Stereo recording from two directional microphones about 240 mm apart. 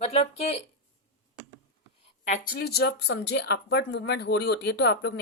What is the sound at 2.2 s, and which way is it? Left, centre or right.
Speech, left.